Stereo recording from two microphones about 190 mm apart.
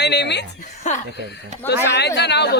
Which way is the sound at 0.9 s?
35° left (ahead or behind).